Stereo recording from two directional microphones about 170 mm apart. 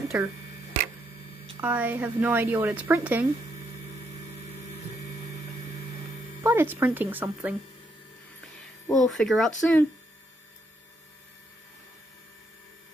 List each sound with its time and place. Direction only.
0.1 s a woman's voice: 15° right (ahead or behind)
1.6 s a woman's voice: 10° right (ahead or behind)
6.4 s a woman's voice: 15° right (ahead or behind)
8.8 s speech: centre (ahead or behind)